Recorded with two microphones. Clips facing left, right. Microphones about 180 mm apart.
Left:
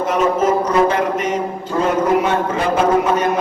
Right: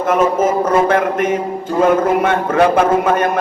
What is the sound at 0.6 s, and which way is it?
A man's voice, 55° right (ahead or behind).